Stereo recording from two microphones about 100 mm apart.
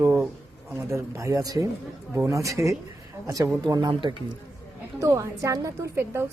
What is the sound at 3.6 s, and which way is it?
Speech, 45° right (ahead or behind).